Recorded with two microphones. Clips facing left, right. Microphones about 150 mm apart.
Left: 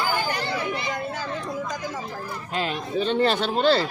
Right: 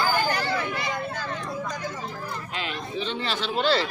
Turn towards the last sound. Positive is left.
turn(degrees=45)  # may be behind; listen again after turning